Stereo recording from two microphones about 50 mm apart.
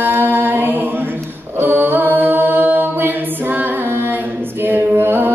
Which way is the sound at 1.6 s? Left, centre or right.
Right.